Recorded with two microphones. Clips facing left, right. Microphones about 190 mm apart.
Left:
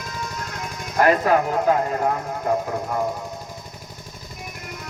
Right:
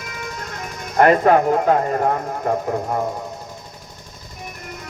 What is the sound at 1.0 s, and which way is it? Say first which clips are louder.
Speech: right 4 dB; 55° right (ahead or behind).